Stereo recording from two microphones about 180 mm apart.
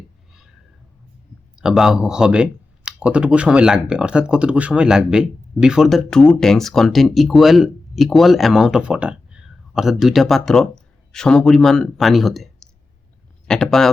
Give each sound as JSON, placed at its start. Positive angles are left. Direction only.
{"t": 1.5, "sound": "speech", "side_deg": -5}